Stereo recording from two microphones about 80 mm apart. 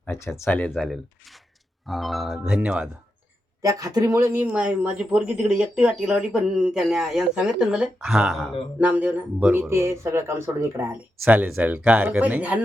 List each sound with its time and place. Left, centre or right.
0.1 s speech: left
0.8 s music: centre
2.6 s speech: centre
3.6 s speech: right
4.2 s speech: right
4.5 s speech: centre
8.8 s speech: centre